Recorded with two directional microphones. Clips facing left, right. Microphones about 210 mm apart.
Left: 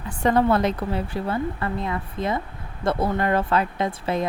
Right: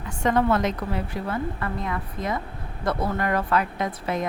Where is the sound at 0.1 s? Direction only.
35° left (ahead or behind).